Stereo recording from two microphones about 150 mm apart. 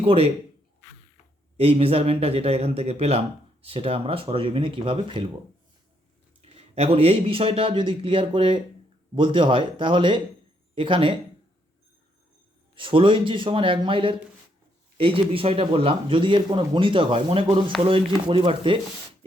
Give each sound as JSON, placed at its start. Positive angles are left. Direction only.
{"t": 0.0, "sound": "speech", "side_deg": -40}
{"t": 1.5, "sound": "speech", "side_deg": -40}
{"t": 6.7, "sound": "speech", "side_deg": -45}
{"t": 12.7, "sound": "speech", "side_deg": -35}